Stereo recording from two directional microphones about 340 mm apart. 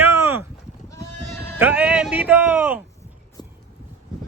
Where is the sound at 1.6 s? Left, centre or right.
Centre.